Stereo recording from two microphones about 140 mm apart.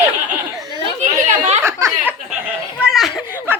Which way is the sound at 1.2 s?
50° right (ahead or behind).